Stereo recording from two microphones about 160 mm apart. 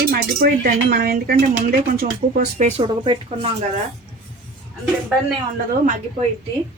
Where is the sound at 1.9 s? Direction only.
60° right (ahead or behind).